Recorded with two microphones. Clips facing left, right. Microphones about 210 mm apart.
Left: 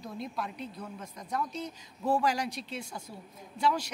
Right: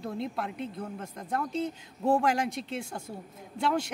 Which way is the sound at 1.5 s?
25° right (ahead or behind).